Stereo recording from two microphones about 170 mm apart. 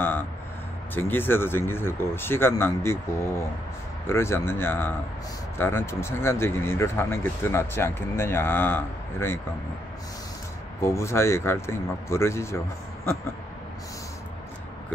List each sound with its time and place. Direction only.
0.9 s speech: 10° left (ahead or behind)
10.8 s speech: 15° left (ahead or behind)